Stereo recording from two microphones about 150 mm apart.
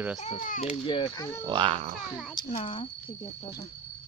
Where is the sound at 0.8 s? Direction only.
35° left (ahead or behind).